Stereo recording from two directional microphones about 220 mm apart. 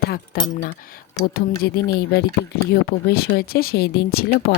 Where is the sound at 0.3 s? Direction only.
45° left (ahead or behind).